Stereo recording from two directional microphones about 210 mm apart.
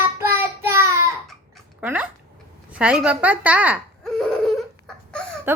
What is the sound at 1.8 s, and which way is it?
Speech, 10° right (ahead or behind).